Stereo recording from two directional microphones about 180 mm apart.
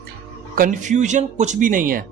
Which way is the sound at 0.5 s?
50° right (ahead or behind).